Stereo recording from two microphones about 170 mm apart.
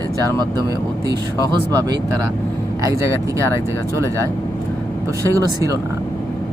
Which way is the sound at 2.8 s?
15° right (ahead or behind).